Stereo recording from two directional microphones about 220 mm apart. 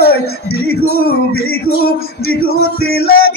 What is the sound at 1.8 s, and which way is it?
Male singing, 45° left (ahead or behind).